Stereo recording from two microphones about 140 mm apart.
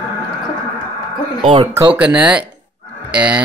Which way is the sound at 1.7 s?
15° right (ahead or behind).